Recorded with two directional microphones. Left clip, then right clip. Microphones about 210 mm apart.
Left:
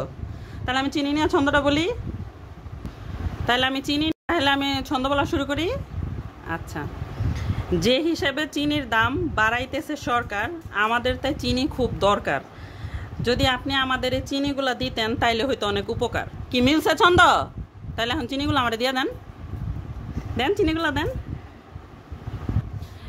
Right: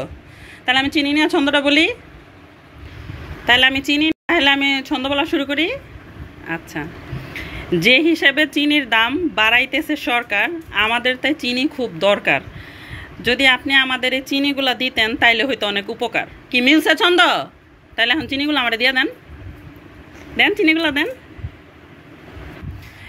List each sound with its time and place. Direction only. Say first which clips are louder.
1.0 s speech: right 5 dB; 15° left (ahead or behind)
3.4 s speech: right 8 dB; 15° left (ahead or behind)
20.3 s speech: right 8 dB; 15° left (ahead or behind)